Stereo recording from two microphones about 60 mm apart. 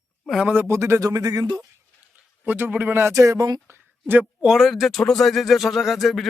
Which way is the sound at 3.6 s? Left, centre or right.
Right.